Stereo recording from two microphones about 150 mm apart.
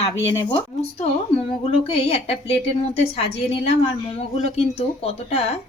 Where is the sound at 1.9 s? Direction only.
40° left (ahead or behind).